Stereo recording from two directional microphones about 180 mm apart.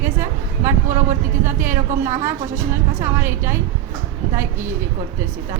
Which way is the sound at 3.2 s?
15° right (ahead or behind).